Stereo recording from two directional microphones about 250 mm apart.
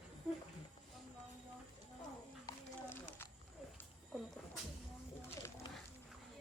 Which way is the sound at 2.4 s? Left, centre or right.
Centre.